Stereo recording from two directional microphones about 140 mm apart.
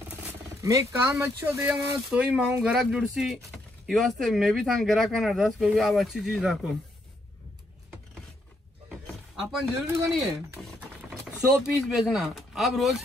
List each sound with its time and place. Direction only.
0.1 s speech: 20° right (ahead or behind); by 6.8 s centre (ahead or behind)
9.9 s speech: 15° right (ahead or behind)
10.6 s speech: 5° right (ahead or behind)